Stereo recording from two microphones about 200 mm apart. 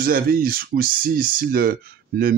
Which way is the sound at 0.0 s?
45° right (ahead or behind).